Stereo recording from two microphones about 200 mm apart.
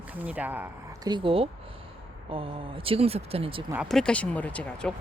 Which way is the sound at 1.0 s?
25° right (ahead or behind).